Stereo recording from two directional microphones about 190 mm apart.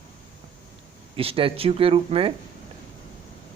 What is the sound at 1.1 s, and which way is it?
Speech, 30° right (ahead or behind).